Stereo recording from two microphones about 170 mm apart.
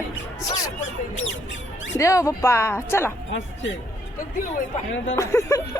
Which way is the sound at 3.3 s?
90° left.